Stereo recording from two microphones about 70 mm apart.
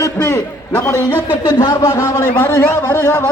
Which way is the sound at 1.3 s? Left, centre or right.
Left.